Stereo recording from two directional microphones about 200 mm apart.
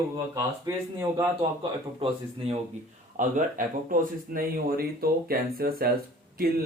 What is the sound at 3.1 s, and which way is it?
Speech, 40° right (ahead or behind).